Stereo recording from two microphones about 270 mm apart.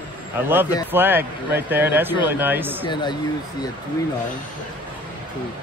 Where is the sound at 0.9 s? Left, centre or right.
Centre.